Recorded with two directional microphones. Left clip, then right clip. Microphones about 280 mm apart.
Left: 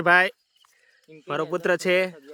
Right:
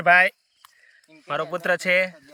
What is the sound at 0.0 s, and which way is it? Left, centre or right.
Speech, centre.